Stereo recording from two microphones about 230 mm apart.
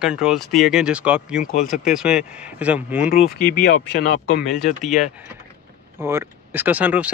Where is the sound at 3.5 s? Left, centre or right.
Left.